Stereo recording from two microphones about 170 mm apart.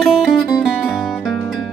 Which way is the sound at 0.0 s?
5° left (ahead or behind).